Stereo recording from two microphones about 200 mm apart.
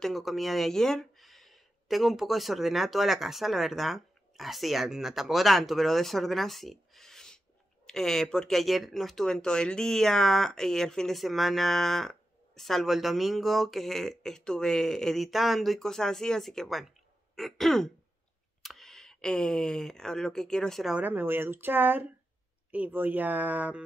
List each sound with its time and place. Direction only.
0.0 s speech: centre (ahead or behind)